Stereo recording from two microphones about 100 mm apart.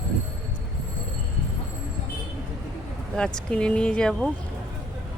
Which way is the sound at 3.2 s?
10° left (ahead or behind).